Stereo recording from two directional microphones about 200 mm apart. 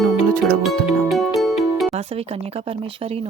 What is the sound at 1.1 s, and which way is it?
Music, centre (ahead or behind).